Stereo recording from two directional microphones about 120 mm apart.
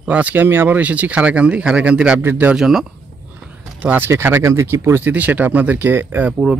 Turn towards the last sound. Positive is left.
turn(degrees=-10)  # may be behind; listen again after turning